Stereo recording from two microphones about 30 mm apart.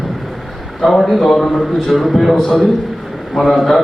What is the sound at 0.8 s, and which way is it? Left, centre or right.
A man's voice, centre.